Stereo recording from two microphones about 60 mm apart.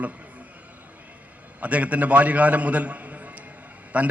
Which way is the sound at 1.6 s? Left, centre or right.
Right.